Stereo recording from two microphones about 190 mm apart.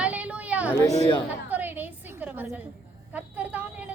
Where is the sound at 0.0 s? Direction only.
5° right (ahead or behind).